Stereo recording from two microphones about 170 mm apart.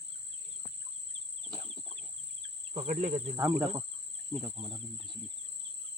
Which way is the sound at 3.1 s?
25° right (ahead or behind).